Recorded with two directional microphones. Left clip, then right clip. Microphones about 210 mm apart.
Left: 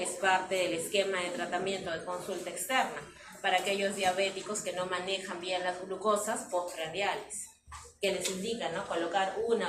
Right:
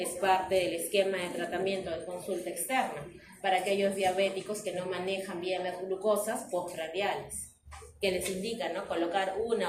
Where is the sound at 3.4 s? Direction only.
30° right (ahead or behind).